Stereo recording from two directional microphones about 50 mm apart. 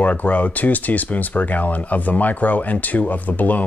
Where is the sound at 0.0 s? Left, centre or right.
Left.